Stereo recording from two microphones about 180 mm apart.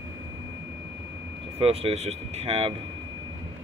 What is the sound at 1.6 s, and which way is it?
Speech, 35° right (ahead or behind).